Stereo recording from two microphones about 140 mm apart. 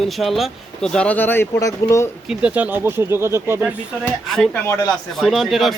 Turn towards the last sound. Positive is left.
turn(degrees=0)  # may be behind; listen again after turning